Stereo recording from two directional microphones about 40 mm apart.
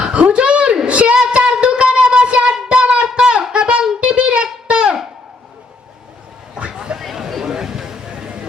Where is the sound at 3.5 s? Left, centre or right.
Right.